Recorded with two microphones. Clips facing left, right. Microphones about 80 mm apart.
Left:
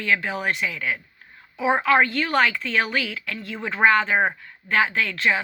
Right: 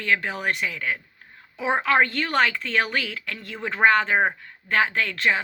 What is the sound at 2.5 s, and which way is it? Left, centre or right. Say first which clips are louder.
Speech: left 1 dB; right.